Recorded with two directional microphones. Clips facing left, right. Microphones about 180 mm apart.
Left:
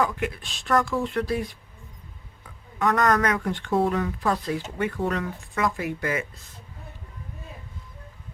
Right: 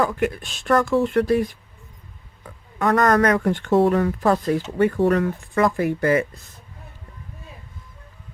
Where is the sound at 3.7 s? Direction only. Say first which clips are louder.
Right 6 dB; 75° right (ahead or behind).